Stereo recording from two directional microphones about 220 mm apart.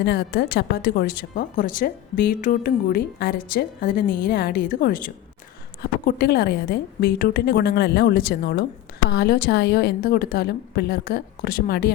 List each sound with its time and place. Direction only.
0.0 s a woman's voice: 45° left (ahead or behind)